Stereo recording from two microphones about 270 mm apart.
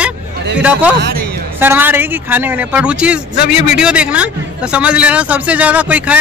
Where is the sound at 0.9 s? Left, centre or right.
Right.